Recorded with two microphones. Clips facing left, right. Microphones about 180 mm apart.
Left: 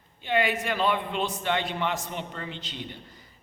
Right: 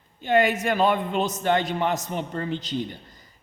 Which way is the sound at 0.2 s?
45° right (ahead or behind).